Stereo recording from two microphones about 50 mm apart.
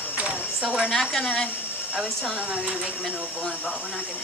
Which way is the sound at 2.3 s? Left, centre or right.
Right.